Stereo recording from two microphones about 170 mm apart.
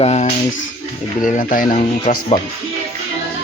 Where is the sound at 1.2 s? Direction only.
50° left (ahead or behind).